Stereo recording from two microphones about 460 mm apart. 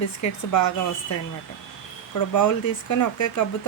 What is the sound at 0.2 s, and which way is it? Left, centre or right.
Speech, left.